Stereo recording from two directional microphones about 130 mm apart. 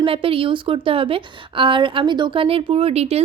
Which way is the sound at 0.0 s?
45° right (ahead or behind).